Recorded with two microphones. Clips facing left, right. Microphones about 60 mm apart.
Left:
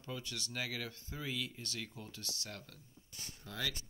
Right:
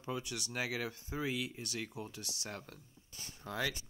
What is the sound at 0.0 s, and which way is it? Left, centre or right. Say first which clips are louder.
Speech: right 4 dB; centre.